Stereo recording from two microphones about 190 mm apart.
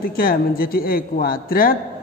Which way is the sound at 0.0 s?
50° left (ahead or behind).